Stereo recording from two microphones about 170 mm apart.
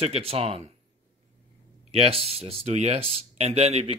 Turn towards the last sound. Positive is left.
turn(degrees=-35)  # may be behind; listen again after turning